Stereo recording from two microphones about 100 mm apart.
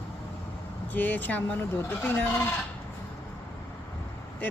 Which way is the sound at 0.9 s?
20° left (ahead or behind).